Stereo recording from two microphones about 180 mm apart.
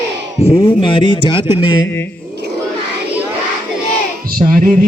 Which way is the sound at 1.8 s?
10° left (ahead or behind).